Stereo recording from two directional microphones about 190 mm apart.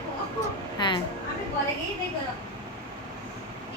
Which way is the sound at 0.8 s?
25° left (ahead or behind).